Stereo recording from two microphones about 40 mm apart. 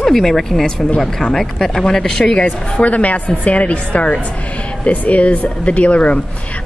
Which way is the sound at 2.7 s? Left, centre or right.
Left.